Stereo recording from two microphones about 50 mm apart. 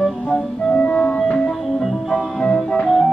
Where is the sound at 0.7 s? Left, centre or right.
Left.